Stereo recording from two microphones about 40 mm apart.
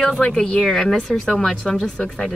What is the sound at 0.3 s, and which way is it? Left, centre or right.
Speech, centre.